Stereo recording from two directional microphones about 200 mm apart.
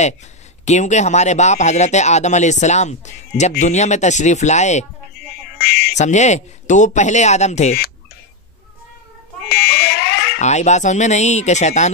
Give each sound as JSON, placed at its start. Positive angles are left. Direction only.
{"t": 0.7, "sound": "speech", "side_deg": 35}
{"t": 5.2, "sound": "music", "side_deg": 55}
{"t": 5.6, "sound": "speech", "side_deg": 55}
{"t": 5.9, "sound": "speech", "side_deg": 35}
{"t": 9.5, "sound": "speech", "side_deg": 50}
{"t": 10.4, "sound": "speech", "side_deg": 35}